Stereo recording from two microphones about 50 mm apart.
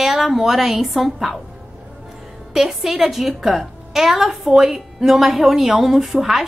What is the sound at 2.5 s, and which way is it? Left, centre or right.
A woman's voice, centre.